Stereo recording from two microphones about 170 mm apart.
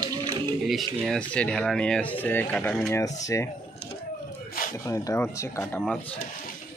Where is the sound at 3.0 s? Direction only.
20° left (ahead or behind).